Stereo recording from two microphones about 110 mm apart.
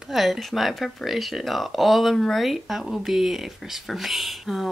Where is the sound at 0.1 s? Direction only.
Centre (ahead or behind).